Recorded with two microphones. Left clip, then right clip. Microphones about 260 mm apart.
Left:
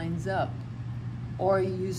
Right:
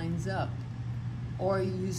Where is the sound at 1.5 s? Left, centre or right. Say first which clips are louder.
Left 5 dB; centre.